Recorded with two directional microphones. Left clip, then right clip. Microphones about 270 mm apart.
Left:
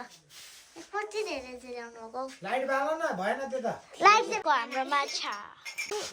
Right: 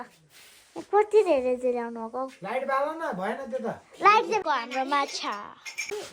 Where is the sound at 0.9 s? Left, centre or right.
Centre.